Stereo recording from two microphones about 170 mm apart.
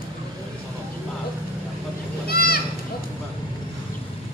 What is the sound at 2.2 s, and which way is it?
Goat, 65° left (ahead or behind).